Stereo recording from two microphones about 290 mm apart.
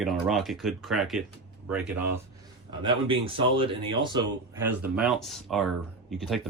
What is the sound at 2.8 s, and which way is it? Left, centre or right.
A man's voice, centre.